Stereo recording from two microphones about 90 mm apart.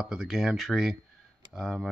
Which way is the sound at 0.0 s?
5° right (ahead or behind).